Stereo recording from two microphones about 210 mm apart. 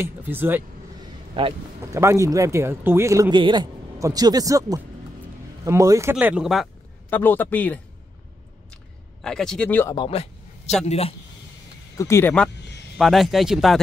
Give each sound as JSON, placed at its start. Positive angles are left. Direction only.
{"t": 0.0, "sound": "speech", "side_deg": -10}
{"t": 1.3, "sound": "speech", "side_deg": -25}
{"t": 7.1, "sound": "a man's voice", "side_deg": 10}
{"t": 9.2, "sound": "speech", "side_deg": 5}
{"t": 9.9, "sound": "speech", "side_deg": 25}
{"t": 12.0, "sound": "a man's voice", "side_deg": 10}
{"t": 12.9, "sound": "speech", "side_deg": 0}